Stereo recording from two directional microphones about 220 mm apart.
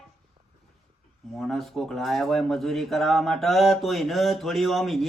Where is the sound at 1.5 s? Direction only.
Centre (ahead or behind).